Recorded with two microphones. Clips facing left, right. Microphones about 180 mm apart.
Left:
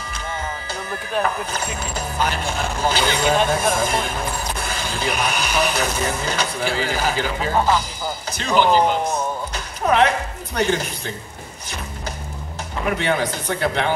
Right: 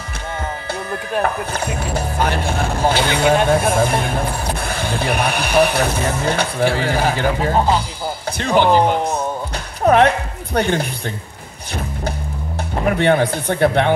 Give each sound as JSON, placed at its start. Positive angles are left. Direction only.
{"t": 1.2, "sound": "speech", "side_deg": -60}
{"t": 7.5, "sound": "speech", "side_deg": -20}
{"t": 8.3, "sound": "speech", "side_deg": -60}
{"t": 9.8, "sound": "a woman's voice", "side_deg": -55}
{"t": 12.8, "sound": "speech", "side_deg": -55}